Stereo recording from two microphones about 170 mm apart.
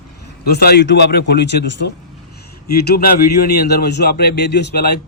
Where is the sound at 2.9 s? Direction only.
65° left (ahead or behind).